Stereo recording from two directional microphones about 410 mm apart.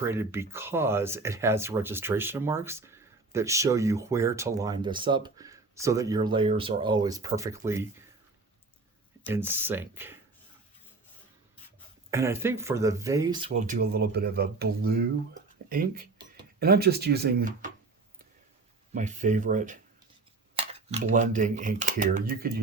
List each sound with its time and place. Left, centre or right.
0.0 s speech: centre
9.2 s speech: centre
12.1 s speech: centre
18.9 s speech: centre